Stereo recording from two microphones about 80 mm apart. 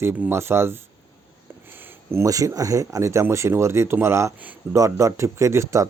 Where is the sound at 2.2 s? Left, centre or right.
Right.